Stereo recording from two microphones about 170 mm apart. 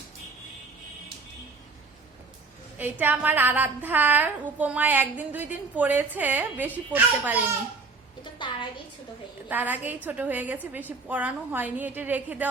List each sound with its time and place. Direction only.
2.7 s a woman's voice: 10° right (ahead or behind)
8.2 s a sound: 30° left (ahead or behind)
9.5 s a woman's voice: 10° right (ahead or behind)